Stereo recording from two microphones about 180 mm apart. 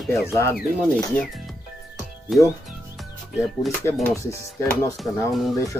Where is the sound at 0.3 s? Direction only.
15° left (ahead or behind).